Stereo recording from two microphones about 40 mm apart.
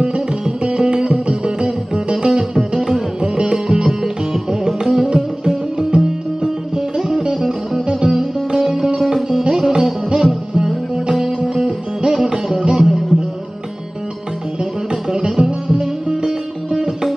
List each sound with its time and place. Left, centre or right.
0.7 s music: right
5.9 s music: right
7.0 s music: centre
11.2 s music: centre
14.6 s music: centre